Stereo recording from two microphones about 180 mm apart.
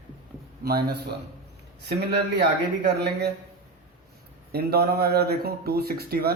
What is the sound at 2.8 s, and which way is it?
Speech, 65° right (ahead or behind).